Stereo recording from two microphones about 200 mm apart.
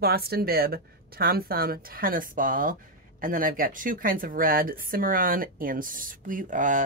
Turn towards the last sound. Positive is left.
turn(degrees=-40)  # may be behind; listen again after turning